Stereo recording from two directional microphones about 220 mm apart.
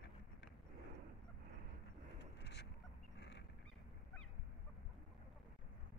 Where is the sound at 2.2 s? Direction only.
50° left (ahead or behind).